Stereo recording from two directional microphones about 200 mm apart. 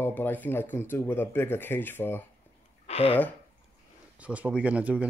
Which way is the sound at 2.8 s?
30° left (ahead or behind).